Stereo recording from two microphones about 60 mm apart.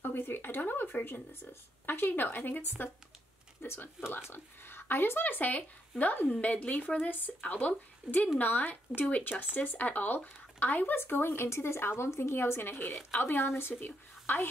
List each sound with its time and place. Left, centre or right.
0.0 s speech: left
3.6 s speech: left
6.2 s a woman's voice: centre; by 14.5 s left